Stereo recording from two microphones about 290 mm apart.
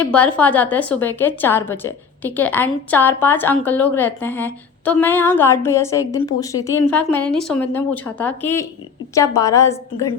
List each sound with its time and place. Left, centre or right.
0.0 s a woman's voice: centre